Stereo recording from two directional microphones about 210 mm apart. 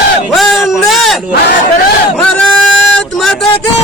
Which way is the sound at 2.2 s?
5° left (ahead or behind).